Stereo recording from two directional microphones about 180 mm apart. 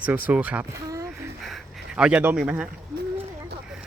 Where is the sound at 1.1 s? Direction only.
Centre (ahead or behind).